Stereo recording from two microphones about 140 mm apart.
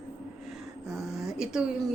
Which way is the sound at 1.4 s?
5° right (ahead or behind).